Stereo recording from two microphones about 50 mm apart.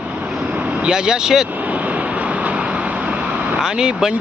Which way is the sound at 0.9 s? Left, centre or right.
Centre.